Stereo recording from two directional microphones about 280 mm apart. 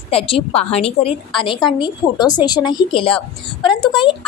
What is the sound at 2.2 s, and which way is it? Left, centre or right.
A woman's voice, centre.